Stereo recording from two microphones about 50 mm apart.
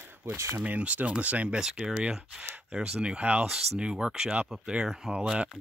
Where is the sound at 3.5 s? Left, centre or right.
Centre.